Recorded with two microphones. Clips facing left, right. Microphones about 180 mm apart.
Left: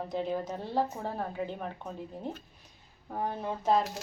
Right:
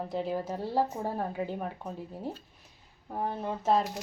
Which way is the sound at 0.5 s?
35° right (ahead or behind).